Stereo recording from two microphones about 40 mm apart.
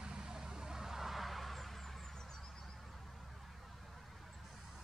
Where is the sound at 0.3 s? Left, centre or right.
Centre.